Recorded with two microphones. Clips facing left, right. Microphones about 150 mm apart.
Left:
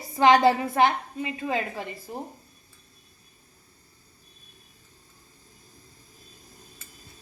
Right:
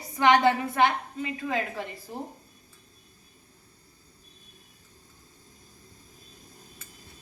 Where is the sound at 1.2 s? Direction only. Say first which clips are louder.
Left 2 dB; 20° left (ahead or behind).